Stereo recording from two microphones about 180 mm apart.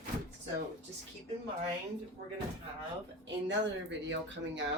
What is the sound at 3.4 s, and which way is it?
Speech, 85° right.